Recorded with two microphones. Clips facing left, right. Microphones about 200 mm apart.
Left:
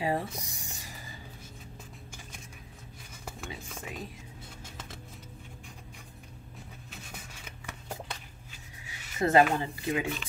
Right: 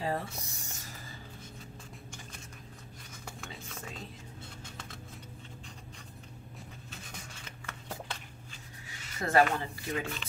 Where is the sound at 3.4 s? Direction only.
15° left (ahead or behind).